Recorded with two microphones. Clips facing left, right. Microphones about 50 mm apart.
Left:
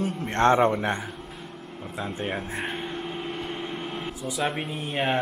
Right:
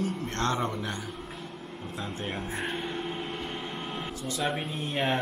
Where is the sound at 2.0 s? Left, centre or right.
Centre.